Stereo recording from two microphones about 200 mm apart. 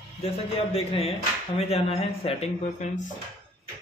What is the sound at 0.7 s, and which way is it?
A man's voice, 30° left (ahead or behind).